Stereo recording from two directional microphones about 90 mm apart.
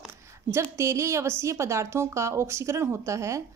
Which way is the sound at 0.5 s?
30° right (ahead or behind).